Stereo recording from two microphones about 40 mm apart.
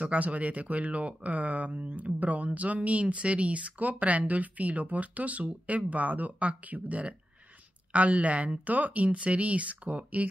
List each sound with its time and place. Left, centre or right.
0.0 s speech: right